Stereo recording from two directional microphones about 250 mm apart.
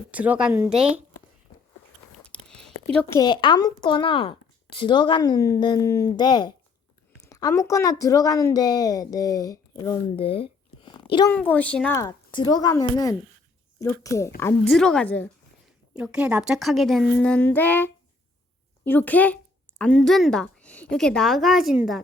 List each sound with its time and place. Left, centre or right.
0.1 s a woman's voice: centre
2.2 s speech: centre
11.3 s a woman's voice: centre
16.0 s a woman's voice: centre